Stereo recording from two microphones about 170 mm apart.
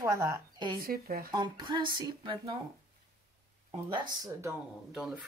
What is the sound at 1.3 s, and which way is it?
A woman's voice, 25° right (ahead or behind).